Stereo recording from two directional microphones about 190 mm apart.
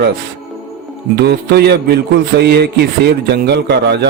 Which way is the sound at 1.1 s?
60° right (ahead or behind).